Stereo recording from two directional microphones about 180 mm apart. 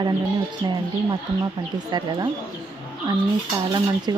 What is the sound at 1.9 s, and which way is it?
Speech, 25° right (ahead or behind).